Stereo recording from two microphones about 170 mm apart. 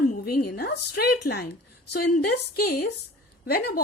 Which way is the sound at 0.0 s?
55° left (ahead or behind).